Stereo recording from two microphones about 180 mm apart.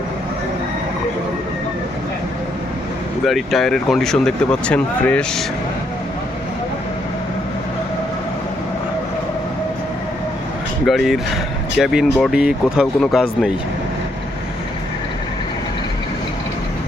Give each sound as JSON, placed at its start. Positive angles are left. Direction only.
{"t": 3.2, "sound": "speech", "side_deg": 0}
{"t": 10.8, "sound": "speech", "side_deg": 0}